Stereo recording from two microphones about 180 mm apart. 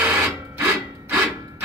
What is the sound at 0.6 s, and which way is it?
Sawing, 15° right (ahead or behind).